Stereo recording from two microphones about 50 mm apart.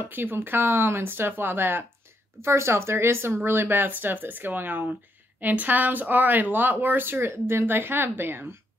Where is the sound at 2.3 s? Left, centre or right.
Right.